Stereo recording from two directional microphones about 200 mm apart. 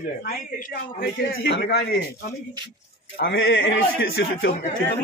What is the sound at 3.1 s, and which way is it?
A man's voice, 50° left (ahead or behind).